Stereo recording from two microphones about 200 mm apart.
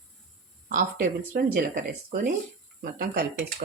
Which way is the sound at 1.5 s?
45° right (ahead or behind).